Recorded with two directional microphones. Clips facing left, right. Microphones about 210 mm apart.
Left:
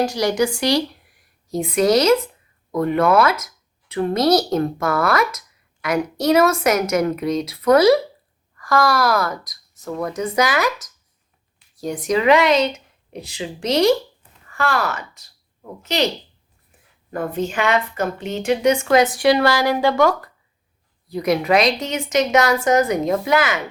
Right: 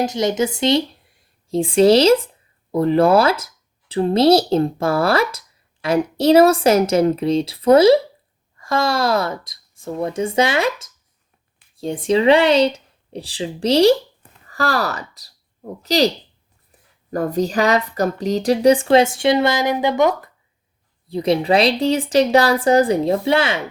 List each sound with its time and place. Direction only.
0.0 s a woman's voice: 20° right (ahead or behind)
14.2 s a sound: 35° right (ahead or behind)
15.8 s a woman's voice: 35° right (ahead or behind)
17.1 s a woman's voice: 40° right (ahead or behind)